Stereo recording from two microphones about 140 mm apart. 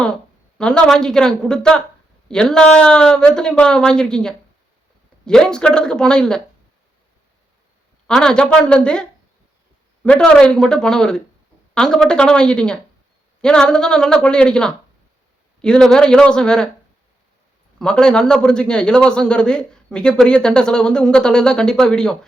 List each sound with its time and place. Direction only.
0.6 s a woman's voice: 5° left (ahead or behind)
8.0 s a man's voice: 5° left (ahead or behind)
17.7 s a man's voice: 5° left (ahead or behind)